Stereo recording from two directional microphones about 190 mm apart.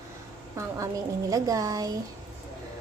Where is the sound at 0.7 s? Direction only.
15° right (ahead or behind).